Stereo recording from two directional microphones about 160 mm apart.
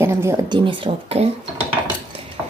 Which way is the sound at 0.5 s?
30° right (ahead or behind).